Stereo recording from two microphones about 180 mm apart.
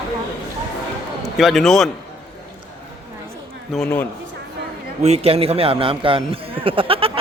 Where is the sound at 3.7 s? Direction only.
5° left (ahead or behind).